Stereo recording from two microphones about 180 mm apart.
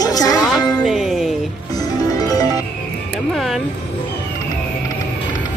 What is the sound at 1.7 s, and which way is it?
Music, 20° left (ahead or behind).